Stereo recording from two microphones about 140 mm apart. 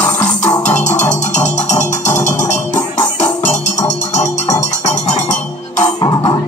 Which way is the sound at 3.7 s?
20° left (ahead or behind).